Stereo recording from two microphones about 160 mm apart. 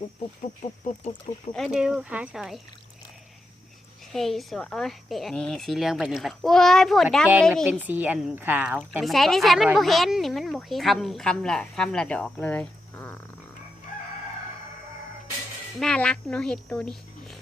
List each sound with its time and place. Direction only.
0.6 s speech: 45° left (ahead or behind)
1.5 s speech: centre (ahead or behind)
4.1 s speech: centre (ahead or behind)
7.9 s speech: 10° right (ahead or behind); by 13.1 s 10° left (ahead or behind)
15.8 s speech: 5° left (ahead or behind)
16.7 s a sound: 5° left (ahead or behind)